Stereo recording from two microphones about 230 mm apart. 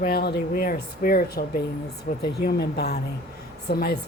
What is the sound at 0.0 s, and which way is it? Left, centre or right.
A woman's voice, left.